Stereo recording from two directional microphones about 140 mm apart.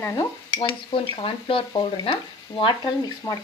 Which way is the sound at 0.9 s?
40° left (ahead or behind).